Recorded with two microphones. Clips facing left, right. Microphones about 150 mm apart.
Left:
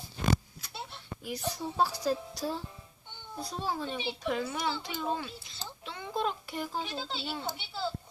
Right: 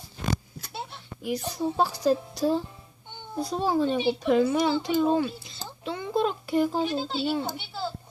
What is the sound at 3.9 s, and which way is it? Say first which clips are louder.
Speech: right 11 dB; 55° right (ahead or behind).